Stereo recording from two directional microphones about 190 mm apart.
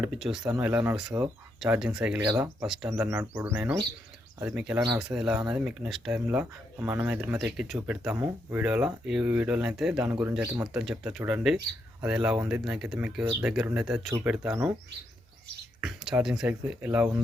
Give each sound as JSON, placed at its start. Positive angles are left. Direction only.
{"t": 0.0, "sound": "speech", "side_deg": -5}
{"t": 2.2, "sound": "speech", "side_deg": -15}
{"t": 2.6, "sound": "speech", "side_deg": -5}
{"t": 15.8, "sound": "speech", "side_deg": -5}